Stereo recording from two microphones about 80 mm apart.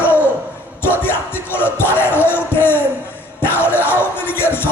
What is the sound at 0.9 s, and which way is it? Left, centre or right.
Music, left.